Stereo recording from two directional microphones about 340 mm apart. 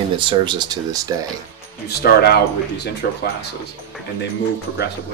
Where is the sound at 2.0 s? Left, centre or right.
Left.